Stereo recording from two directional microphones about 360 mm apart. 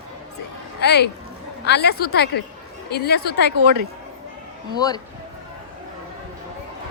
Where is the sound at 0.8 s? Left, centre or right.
Left.